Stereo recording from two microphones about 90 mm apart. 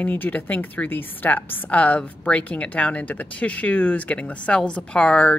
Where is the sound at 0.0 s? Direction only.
20° left (ahead or behind).